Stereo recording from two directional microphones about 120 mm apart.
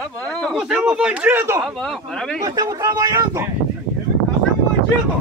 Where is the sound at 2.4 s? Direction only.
30° right (ahead or behind).